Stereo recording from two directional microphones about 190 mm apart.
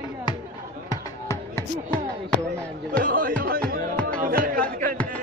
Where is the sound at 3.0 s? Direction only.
50° right (ahead or behind).